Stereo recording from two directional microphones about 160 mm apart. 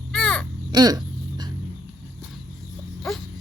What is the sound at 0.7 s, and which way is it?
Speech, 25° right (ahead or behind).